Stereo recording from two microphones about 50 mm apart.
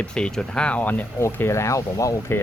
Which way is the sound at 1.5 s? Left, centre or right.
Left.